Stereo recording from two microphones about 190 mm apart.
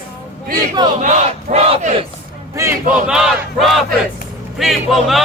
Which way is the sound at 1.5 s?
35° right (ahead or behind).